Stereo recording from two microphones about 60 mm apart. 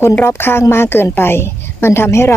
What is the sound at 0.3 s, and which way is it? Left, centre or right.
A woman's voice, left.